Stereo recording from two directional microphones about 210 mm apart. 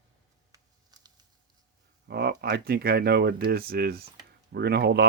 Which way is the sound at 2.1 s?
50° right (ahead or behind).